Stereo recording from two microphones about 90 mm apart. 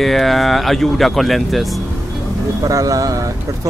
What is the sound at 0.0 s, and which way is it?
Speech, centre (ahead or behind).